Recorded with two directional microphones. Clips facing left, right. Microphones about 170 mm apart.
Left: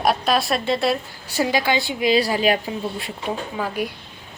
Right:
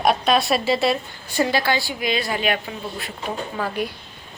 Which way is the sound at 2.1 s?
35° left (ahead or behind).